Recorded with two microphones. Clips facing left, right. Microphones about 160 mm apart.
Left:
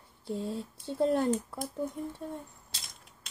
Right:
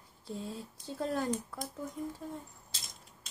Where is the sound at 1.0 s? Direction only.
25° left (ahead or behind).